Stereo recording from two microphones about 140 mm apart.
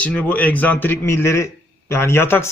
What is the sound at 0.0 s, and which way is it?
A man's voice, 10° left (ahead or behind).